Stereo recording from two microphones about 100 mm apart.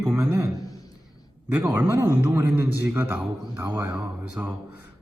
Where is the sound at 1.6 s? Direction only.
20° right (ahead or behind).